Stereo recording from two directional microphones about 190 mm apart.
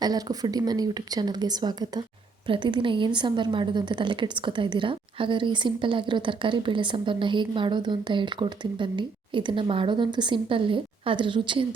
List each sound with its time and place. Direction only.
0.0 s a woman's voice: 20° right (ahead or behind)